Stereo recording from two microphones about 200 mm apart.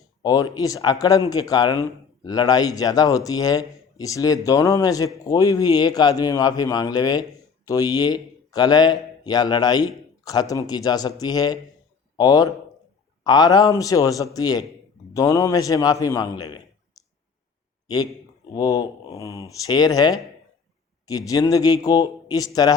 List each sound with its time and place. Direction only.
0.2 s a man's voice: 20° left (ahead or behind)